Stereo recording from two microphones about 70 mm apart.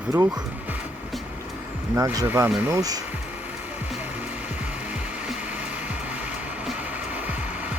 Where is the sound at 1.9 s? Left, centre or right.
Right.